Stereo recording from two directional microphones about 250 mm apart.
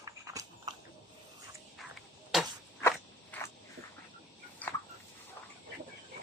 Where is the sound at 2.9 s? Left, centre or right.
Centre.